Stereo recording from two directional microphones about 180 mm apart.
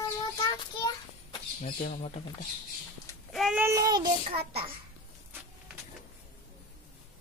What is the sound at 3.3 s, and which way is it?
Child singing, centre (ahead or behind).